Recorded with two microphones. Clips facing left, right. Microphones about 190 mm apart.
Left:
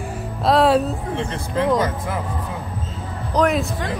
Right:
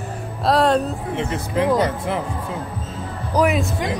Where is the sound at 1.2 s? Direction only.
10° right (ahead or behind).